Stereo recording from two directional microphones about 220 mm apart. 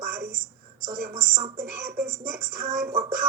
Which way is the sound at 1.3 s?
30° right (ahead or behind).